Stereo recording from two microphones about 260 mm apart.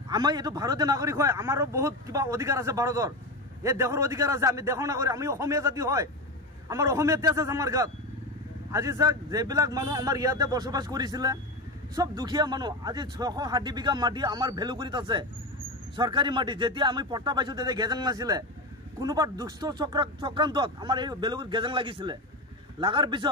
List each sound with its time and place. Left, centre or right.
0.1 s a man's voice: centre